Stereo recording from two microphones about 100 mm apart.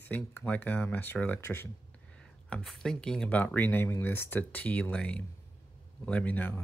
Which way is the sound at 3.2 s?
20° left (ahead or behind).